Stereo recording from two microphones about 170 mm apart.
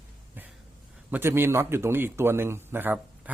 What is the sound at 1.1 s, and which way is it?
A man's voice, 15° right (ahead or behind).